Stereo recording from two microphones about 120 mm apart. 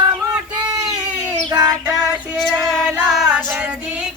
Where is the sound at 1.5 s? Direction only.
30° right (ahead or behind).